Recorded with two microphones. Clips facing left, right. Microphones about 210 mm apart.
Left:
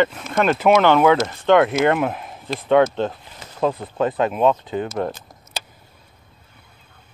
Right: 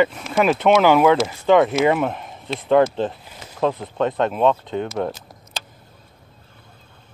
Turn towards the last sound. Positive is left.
turn(degrees=0)  # may be behind; listen again after turning